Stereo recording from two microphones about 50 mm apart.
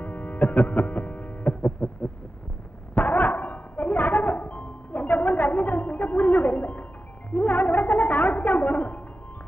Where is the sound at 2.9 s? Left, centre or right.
Left.